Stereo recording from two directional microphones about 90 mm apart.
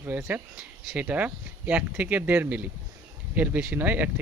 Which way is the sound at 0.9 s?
15° right (ahead or behind).